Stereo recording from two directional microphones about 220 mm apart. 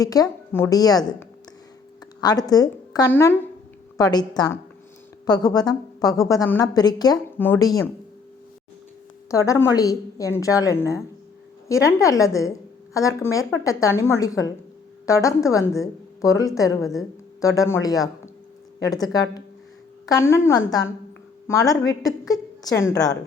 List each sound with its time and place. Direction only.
0.0 s a woman's voice: 15° left (ahead or behind)
9.3 s a woman's voice: 15° left (ahead or behind)